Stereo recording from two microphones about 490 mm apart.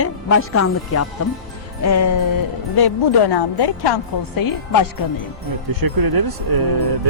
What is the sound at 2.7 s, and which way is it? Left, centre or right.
Speech, left.